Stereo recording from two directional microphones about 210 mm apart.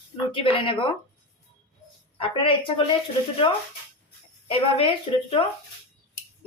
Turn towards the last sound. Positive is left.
turn(degrees=25)  # may be behind; listen again after turning